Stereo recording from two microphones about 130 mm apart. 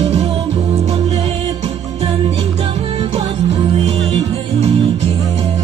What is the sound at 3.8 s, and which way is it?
Music, 55° right (ahead or behind).